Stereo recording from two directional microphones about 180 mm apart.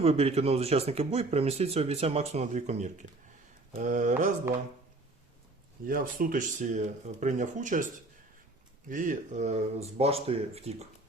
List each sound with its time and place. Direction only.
0.0 s speech: 35° right (ahead or behind)
5.8 s speech: 50° right (ahead or behind)
8.9 s speech: 45° right (ahead or behind)